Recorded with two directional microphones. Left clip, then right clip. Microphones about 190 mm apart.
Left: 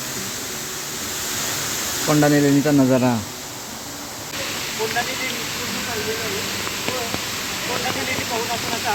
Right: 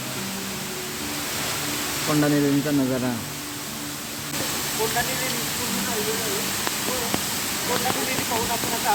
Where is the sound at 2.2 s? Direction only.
30° left (ahead or behind).